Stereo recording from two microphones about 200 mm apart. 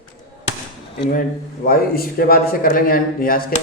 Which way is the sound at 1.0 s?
45° left (ahead or behind).